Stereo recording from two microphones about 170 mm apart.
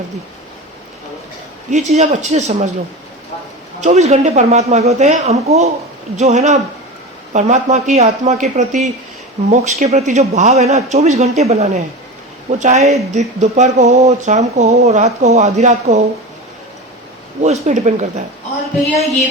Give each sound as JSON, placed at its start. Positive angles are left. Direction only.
{"t": 1.7, "sound": "speech", "side_deg": -45}
{"t": 3.8, "sound": "speech", "side_deg": -40}
{"t": 17.4, "sound": "speech", "side_deg": -45}